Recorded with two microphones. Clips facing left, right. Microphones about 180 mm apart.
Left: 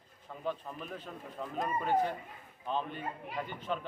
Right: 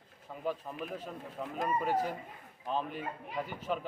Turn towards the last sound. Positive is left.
turn(degrees=-5)  # may be behind; listen again after turning